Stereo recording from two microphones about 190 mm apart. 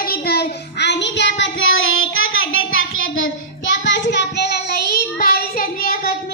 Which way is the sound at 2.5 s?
90° left.